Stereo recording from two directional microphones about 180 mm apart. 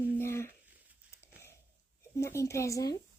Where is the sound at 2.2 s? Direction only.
15° left (ahead or behind).